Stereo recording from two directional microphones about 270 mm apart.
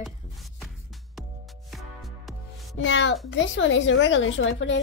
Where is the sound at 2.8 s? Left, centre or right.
Left.